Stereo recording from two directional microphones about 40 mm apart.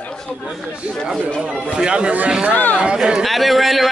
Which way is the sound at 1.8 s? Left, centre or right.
Right.